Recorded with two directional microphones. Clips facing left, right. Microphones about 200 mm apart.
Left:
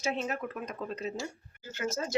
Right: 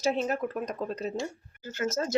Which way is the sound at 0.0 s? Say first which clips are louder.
Right 5 dB; 35° right (ahead or behind).